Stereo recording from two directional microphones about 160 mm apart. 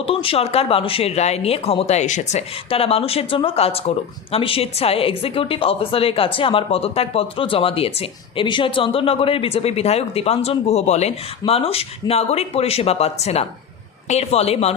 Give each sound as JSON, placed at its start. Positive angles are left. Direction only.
{"t": 0.0, "sound": "speech", "side_deg": 35}